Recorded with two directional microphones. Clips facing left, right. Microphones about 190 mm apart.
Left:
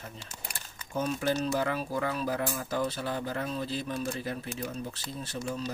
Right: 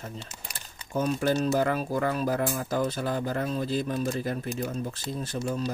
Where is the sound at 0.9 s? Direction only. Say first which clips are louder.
Right 4 dB; 50° right (ahead or behind).